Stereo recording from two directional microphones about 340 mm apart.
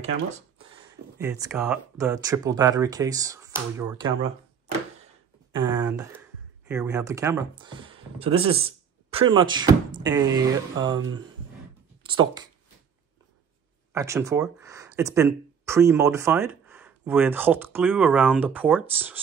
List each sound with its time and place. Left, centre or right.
0.0 s a sound: centre
1.1 s speech: centre
5.8 s a sound: centre
6.7 s speech: centre
8.4 s speech: right
8.6 s speech: centre
12.0 s speech: centre
13.9 s speech: centre